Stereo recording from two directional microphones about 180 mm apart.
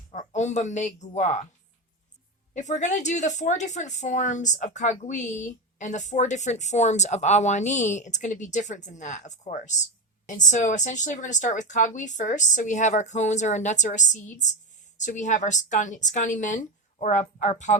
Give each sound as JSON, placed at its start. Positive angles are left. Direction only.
{"t": 0.1, "sound": "speech", "side_deg": 40}
{"t": 2.5, "sound": "a woman's voice", "side_deg": 40}